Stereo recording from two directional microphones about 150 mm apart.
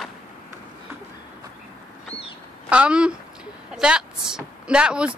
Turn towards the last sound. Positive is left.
turn(degrees=-5)  # may be behind; listen again after turning